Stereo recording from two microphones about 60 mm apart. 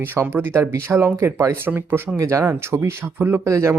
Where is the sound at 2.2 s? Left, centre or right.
Right.